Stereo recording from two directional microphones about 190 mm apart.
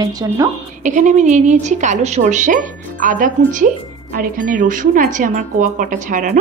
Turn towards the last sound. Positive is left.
turn(degrees=-45)  # may be behind; listen again after turning